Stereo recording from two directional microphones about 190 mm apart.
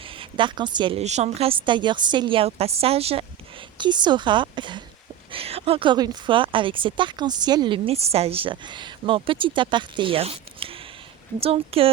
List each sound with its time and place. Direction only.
0.2 s a woman's voice: 25° right (ahead or behind)